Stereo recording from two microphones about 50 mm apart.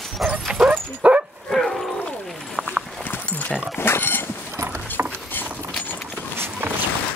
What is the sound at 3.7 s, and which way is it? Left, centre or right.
Speech, left.